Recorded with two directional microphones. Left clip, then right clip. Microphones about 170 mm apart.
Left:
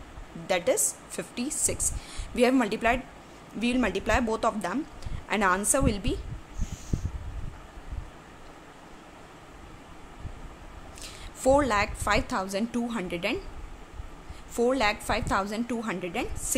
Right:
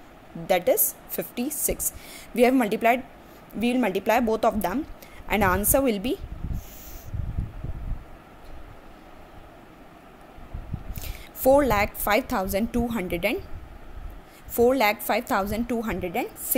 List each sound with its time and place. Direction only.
0.5 s a woman's voice: 15° right (ahead or behind)
11.0 s a woman's voice: 20° right (ahead or behind)
14.5 s a woman's voice: 20° right (ahead or behind)